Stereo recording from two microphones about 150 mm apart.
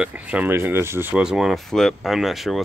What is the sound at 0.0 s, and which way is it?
Speech, 10° right (ahead or behind).